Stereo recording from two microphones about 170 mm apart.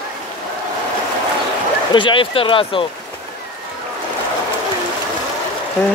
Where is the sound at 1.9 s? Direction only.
30° left (ahead or behind).